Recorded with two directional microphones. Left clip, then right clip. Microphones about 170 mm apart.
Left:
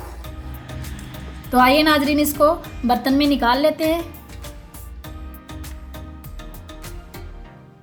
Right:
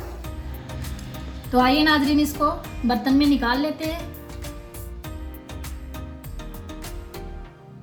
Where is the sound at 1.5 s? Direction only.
45° left (ahead or behind).